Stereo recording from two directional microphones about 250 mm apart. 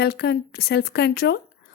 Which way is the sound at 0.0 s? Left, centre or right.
Left.